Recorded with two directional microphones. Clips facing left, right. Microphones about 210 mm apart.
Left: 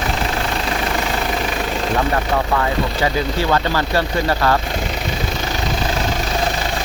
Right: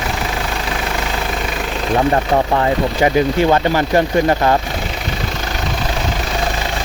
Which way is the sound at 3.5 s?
20° right (ahead or behind).